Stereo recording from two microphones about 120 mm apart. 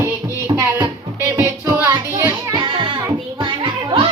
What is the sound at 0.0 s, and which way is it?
Music, 25° right (ahead or behind).